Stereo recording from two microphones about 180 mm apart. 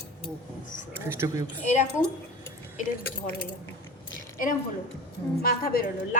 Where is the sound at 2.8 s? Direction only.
45° left (ahead or behind).